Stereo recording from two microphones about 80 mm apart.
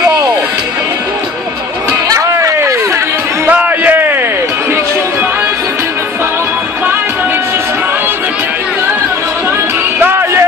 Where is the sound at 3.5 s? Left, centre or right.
Centre.